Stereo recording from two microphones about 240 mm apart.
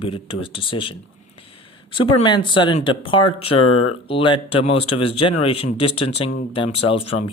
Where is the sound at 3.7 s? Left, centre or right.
Left.